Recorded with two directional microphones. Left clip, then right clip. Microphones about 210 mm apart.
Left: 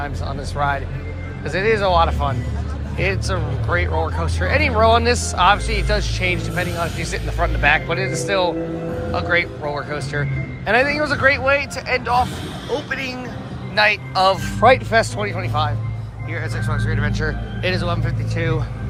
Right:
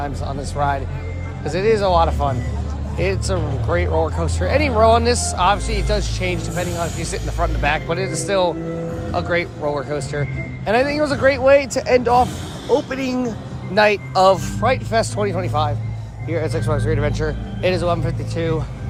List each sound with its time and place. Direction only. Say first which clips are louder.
0.0 s speech: right 1 dB; 25° right (ahead or behind)
14.6 s speech: left 5 dB; 15° right (ahead or behind)